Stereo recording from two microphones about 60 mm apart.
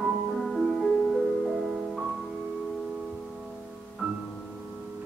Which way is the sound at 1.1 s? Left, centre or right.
Centre.